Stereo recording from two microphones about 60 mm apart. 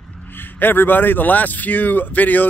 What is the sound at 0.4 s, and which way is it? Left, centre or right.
Speech, left.